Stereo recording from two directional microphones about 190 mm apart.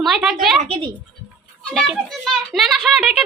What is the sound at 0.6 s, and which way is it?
Speech, 30° right (ahead or behind).